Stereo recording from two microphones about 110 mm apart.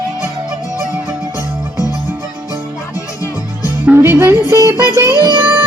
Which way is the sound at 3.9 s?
25° right (ahead or behind).